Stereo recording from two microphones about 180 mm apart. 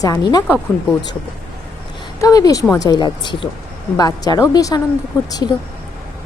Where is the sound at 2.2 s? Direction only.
20° left (ahead or behind).